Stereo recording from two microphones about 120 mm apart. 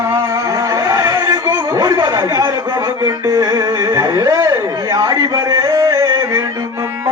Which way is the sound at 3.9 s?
25° right (ahead or behind).